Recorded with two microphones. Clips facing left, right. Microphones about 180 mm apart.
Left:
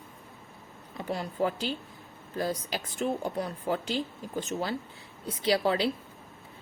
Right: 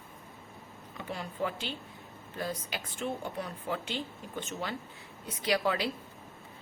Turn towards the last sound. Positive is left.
turn(degrees=30)  # may be behind; listen again after turning